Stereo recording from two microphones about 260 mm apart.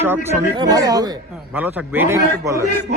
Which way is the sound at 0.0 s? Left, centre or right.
Centre.